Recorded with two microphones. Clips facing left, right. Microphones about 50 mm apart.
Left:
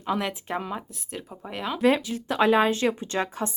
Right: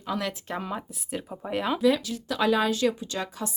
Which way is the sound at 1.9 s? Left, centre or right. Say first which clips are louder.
Left 4 dB; left.